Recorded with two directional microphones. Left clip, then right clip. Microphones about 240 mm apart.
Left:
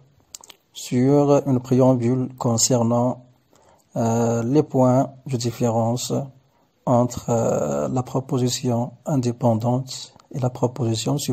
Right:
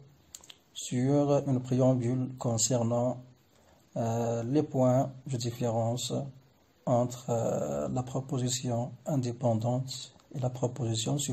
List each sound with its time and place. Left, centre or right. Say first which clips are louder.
0.3 s speech: left 8 dB; left